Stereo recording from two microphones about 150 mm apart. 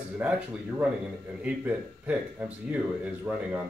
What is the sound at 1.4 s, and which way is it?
Speech, 10° right (ahead or behind).